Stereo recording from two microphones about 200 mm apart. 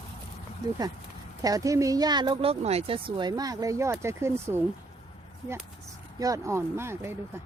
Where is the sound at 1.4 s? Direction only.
15° right (ahead or behind).